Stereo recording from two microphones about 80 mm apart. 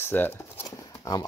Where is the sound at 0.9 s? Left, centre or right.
Left.